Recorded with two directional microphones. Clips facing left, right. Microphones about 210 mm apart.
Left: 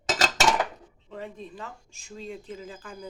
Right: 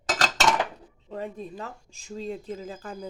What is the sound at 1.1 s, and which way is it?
Speech, 40° right (ahead or behind).